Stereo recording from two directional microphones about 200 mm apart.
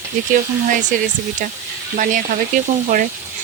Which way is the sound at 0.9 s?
40° right (ahead or behind).